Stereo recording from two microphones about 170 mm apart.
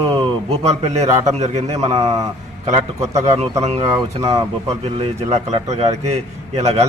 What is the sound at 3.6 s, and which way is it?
Speech, 35° right (ahead or behind).